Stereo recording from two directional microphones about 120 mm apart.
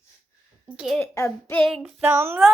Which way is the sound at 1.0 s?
20° left (ahead or behind).